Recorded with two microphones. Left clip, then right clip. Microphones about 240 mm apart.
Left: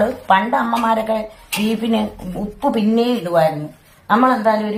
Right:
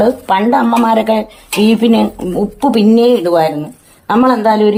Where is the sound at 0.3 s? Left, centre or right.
Right.